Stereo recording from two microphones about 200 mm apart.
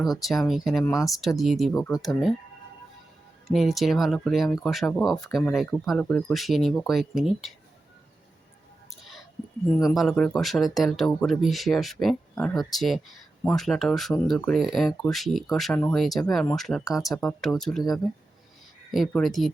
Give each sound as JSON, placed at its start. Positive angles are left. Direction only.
{"t": 0.0, "sound": "speech", "side_deg": 0}
{"t": 0.9, "sound": "speech", "side_deg": 15}
{"t": 1.4, "sound": "speech", "side_deg": 0}
{"t": 3.4, "sound": "speech", "side_deg": 0}
{"t": 8.9, "sound": "whispering", "side_deg": 0}
{"t": 9.9, "sound": "speech", "side_deg": 0}